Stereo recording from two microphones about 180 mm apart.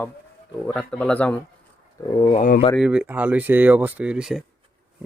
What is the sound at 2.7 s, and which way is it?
Speech, 5° right (ahead or behind).